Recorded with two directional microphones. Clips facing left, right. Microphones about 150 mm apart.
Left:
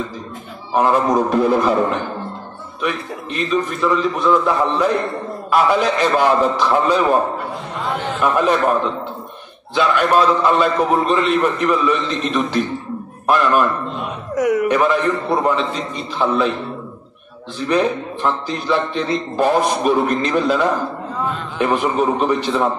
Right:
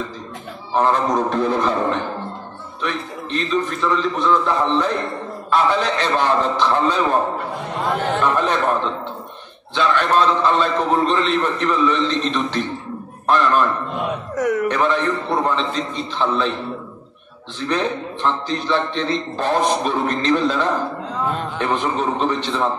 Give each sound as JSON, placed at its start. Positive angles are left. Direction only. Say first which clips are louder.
{"t": 0.7, "sound": "a man's voice", "louder": "left 2 dB", "side_deg": 10}
{"t": 2.8, "sound": "a man's voice", "louder": "left 3 dB", "side_deg": 10}
{"t": 8.2, "sound": "a man's voice", "louder": "left 6 dB", "side_deg": 10}
{"t": 9.8, "sound": "a man's voice", "louder": "left 2 dB", "side_deg": 10}
{"t": 17.6, "sound": "a man's voice", "louder": "left 4 dB", "side_deg": 10}